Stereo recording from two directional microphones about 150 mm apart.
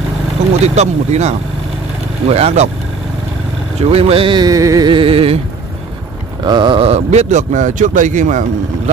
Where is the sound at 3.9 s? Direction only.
40° right (ahead or behind); by 4.9 s 20° right (ahead or behind).